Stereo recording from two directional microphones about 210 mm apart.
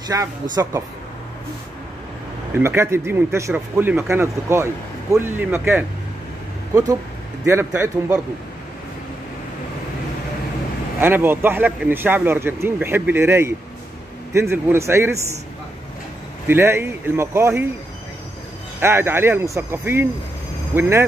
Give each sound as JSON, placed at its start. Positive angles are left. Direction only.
{"t": 0.1, "sound": "speech", "side_deg": -15}
{"t": 2.6, "sound": "speech", "side_deg": -10}
{"t": 11.0, "sound": "speech", "side_deg": -10}
{"t": 16.4, "sound": "speech", "side_deg": -10}
{"t": 18.8, "sound": "speech", "side_deg": -10}